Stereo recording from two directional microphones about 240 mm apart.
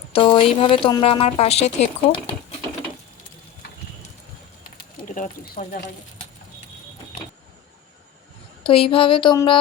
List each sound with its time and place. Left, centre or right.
0.1 s a woman's voice: left
4.8 s speech: left
8.6 s a woman's voice: left